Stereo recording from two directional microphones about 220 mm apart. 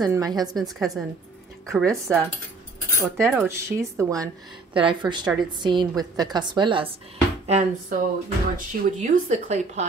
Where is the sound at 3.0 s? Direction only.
10° right (ahead or behind).